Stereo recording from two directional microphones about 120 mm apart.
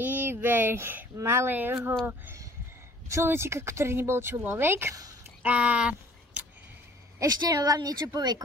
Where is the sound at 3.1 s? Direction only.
20° right (ahead or behind).